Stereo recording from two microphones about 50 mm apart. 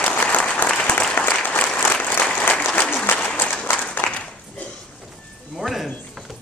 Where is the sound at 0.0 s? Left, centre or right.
Left.